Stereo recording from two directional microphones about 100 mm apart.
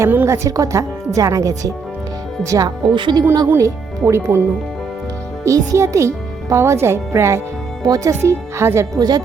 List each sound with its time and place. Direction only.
0.0 s a woman's voice: 25° right (ahead or behind)
0.4 s speech: 35° right (ahead or behind)
2.6 s speech: 50° right (ahead or behind)
3.4 s speech: 30° right (ahead or behind)
5.5 s a child's voice: 30° right (ahead or behind)
8.2 s speech: 25° right (ahead or behind)
9.0 s speech: 40° right (ahead or behind)